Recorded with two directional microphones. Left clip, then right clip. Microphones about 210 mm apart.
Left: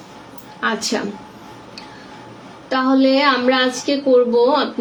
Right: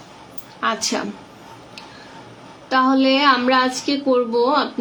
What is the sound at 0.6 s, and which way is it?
Speech, centre (ahead or behind).